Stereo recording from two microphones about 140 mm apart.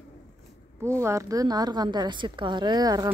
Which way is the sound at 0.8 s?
20° right (ahead or behind).